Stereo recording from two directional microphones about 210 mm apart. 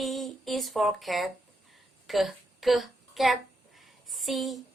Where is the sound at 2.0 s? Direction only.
Centre (ahead or behind).